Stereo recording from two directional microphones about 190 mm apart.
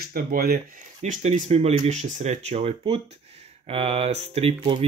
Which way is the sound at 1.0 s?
40° right (ahead or behind).